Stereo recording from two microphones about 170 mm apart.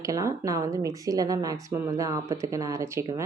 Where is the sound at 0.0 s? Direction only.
20° right (ahead or behind).